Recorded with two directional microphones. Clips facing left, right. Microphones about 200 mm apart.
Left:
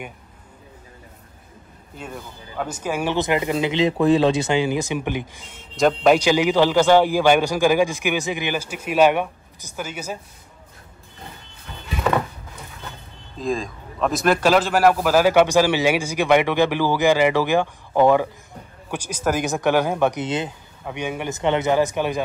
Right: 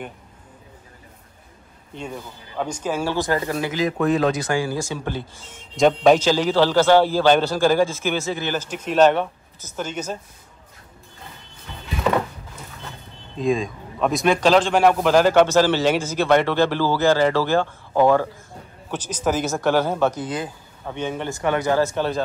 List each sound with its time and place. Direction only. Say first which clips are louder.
2.0 s a man's voice: right 2 dB; centre (ahead or behind)
5.8 s speech: right 1 dB; centre (ahead or behind)
6.1 s a man's voice: left 1 dB; 15° left (ahead or behind)
13.4 s a man's voice: right 3 dB; centre (ahead or behind); by 20.5 s 25° left (ahead or behind)
20.8 s a man's voice: even; 10° left (ahead or behind)